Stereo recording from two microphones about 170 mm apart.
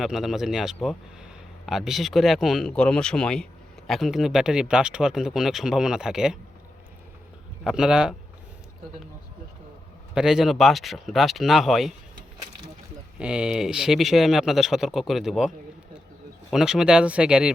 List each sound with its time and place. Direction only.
0.0 s speech: centre (ahead or behind)
7.6 s speech: 5° right (ahead or behind)
10.2 s speech: 5° right (ahead or behind)
13.1 s speech: 5° right (ahead or behind)